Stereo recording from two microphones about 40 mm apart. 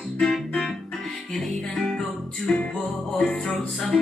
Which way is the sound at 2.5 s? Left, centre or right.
Left.